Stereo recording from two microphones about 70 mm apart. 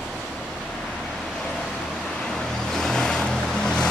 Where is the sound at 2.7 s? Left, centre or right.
Centre.